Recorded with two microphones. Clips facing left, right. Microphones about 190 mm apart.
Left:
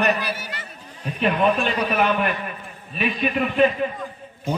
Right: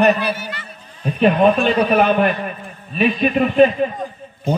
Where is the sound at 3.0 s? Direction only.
30° right (ahead or behind).